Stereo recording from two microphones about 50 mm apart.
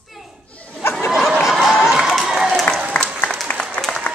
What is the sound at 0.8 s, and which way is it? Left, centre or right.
Snicker, left.